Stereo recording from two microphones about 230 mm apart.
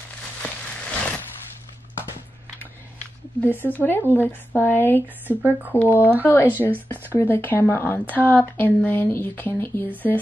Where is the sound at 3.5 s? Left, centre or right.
Centre.